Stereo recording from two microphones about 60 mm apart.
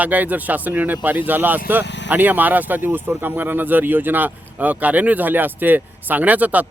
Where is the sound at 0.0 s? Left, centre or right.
Right.